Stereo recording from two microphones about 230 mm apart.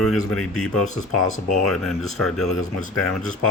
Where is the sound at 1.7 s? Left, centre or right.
Centre.